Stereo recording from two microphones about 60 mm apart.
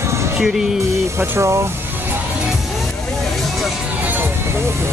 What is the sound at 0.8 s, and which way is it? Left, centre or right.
Music, right.